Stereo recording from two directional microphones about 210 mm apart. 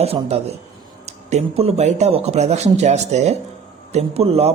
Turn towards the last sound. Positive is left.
turn(degrees=-30)  # may be behind; listen again after turning